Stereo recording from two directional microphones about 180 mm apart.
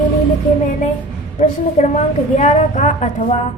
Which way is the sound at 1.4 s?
40° left (ahead or behind).